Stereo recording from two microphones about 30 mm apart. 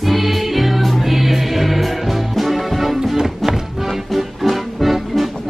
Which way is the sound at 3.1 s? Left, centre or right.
Centre.